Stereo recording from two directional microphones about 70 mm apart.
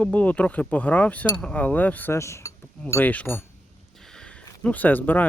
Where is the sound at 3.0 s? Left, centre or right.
Left.